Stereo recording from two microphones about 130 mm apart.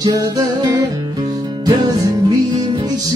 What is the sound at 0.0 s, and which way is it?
Music, 30° right (ahead or behind).